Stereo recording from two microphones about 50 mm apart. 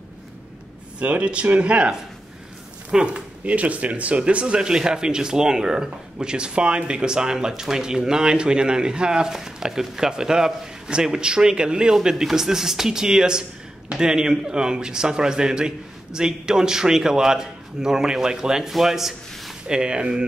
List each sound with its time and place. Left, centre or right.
0.9 s speech: right; by 19.8 s centre
19.8 s speech: centre